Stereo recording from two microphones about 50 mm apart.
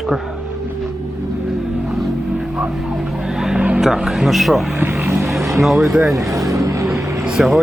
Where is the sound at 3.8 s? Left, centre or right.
Centre.